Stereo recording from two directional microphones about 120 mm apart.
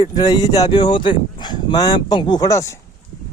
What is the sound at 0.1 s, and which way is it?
Speech, 35° left (ahead or behind).